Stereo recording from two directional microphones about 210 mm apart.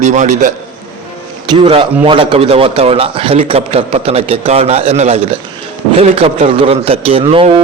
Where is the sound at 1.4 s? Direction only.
25° right (ahead or behind).